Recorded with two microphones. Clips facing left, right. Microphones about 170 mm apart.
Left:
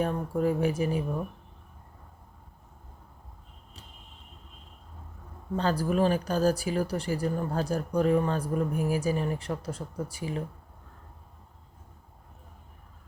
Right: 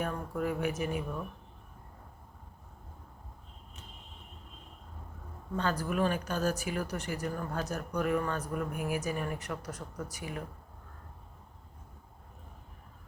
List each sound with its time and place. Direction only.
0.0 s speech: 30° left (ahead or behind)
5.5 s speech: 35° left (ahead or behind)